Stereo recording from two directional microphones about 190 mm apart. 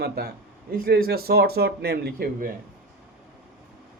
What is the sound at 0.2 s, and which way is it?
Speech, 55° right (ahead or behind).